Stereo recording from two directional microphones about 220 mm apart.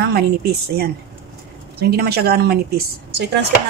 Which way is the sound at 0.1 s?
45° right (ahead or behind).